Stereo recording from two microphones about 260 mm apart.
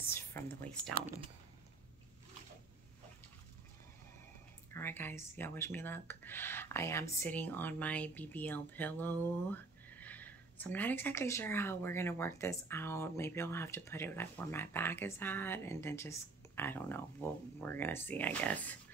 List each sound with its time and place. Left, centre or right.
0.1 s speech: centre
4.7 s speech: centre